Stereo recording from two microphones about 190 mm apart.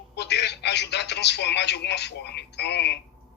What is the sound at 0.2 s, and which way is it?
A man's voice, 65° left (ahead or behind).